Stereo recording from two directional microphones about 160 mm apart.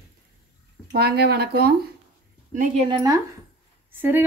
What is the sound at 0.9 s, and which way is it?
Speech, 80° right.